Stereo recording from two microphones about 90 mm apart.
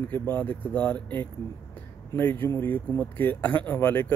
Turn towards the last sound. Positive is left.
turn(degrees=20)  # may be behind; listen again after turning